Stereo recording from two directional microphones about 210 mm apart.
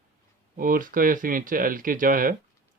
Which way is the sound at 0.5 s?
40° right (ahead or behind).